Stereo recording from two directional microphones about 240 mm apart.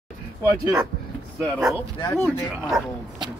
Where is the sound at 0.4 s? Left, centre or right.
Centre.